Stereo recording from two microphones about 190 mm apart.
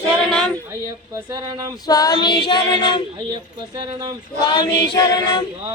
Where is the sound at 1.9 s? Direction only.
20° left (ahead or behind).